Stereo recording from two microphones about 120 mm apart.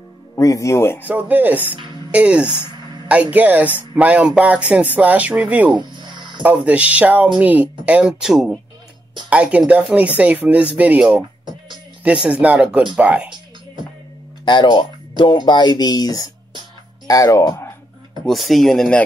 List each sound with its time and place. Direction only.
0.4 s speech: 25° left (ahead or behind)
1.0 s speech: 15° right (ahead or behind)
5.8 s music: 40° right (ahead or behind)
6.4 s speech: 10° right (ahead or behind)
14.4 s speech: 40° left (ahead or behind)
18.2 s speech: centre (ahead or behind)